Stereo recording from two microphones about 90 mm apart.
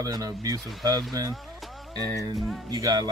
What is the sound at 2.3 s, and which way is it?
Music, centre (ahead or behind).